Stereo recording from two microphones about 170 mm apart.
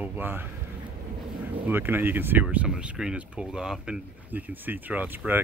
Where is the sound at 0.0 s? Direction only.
10° right (ahead or behind).